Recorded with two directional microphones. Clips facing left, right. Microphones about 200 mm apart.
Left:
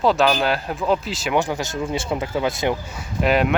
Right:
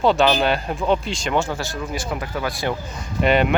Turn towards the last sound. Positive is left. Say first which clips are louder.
# right 1 dB
turn(degrees=0)  # may be behind; listen again after turning